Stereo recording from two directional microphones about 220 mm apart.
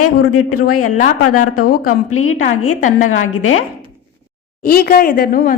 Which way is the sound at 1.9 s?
75° left (ahead or behind).